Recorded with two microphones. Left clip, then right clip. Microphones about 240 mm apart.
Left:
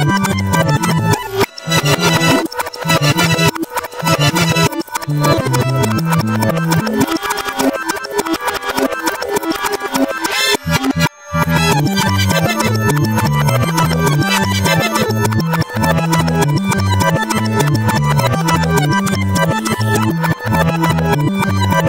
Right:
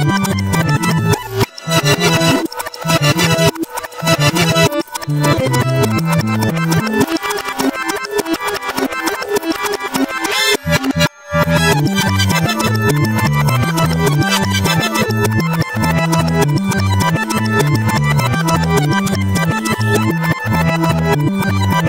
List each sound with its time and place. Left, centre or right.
0.0 s music: right
9.9 s music: right